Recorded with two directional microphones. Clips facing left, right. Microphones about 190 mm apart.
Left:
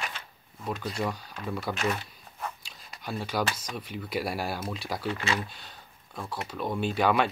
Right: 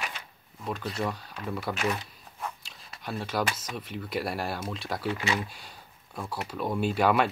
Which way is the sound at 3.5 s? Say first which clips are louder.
Even; 5° right (ahead or behind).